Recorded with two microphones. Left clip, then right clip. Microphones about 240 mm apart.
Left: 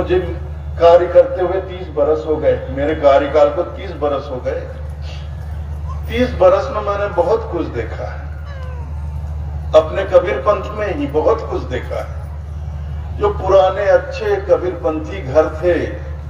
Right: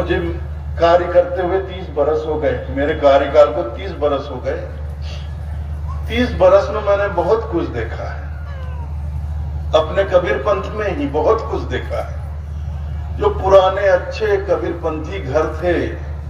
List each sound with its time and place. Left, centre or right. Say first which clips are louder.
0.7 s a man's voice: left 3 dB; right
6.0 s a man's voice: left 1 dB; right
9.7 s a man's voice: left 2 dB; right
13.2 s a man's voice: right 1 dB; right